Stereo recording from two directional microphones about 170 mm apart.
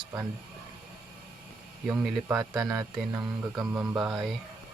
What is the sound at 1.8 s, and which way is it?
Speech, 5° right (ahead or behind).